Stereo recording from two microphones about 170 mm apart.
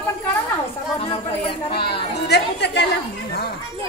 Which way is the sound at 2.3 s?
80° left.